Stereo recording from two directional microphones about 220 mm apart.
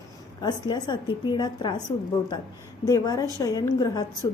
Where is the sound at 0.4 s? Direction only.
20° left (ahead or behind).